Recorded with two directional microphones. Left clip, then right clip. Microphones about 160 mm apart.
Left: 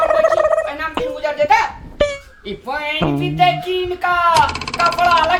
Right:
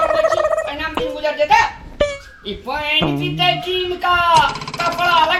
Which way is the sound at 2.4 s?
25° left (ahead or behind).